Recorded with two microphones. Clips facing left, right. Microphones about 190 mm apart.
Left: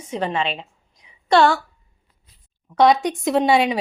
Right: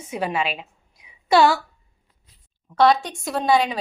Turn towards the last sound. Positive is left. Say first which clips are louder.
# left 3 dB
turn(degrees=25)  # may be behind; listen again after turning